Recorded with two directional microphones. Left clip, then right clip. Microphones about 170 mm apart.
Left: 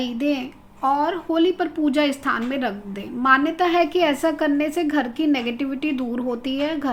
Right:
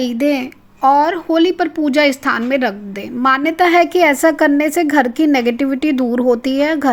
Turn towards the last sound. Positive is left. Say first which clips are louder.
# right 9 dB
turn(degrees=-50)  # may be behind; listen again after turning